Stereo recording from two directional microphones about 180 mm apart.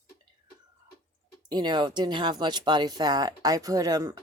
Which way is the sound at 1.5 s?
25° right (ahead or behind).